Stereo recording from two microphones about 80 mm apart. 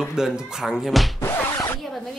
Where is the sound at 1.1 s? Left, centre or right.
Left.